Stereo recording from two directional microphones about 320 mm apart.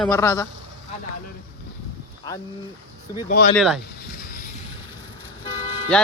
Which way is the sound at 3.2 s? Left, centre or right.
Left.